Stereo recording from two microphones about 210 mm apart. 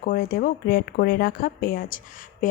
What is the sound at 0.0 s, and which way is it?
Speech, 45° left (ahead or behind).